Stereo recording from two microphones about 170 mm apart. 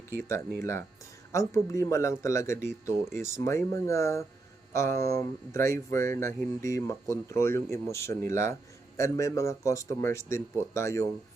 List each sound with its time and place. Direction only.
0.2 s speech: 15° left (ahead or behind)